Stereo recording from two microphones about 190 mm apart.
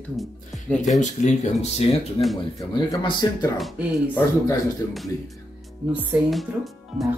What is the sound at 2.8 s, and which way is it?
Speech, 20° left (ahead or behind).